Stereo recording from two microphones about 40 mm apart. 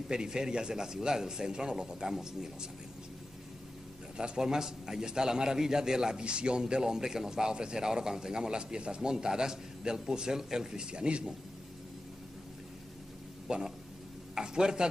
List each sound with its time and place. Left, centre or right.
0.1 s a man's voice: centre
4.2 s a man's voice: centre
6.2 s a man's voice: right
13.5 s speech: centre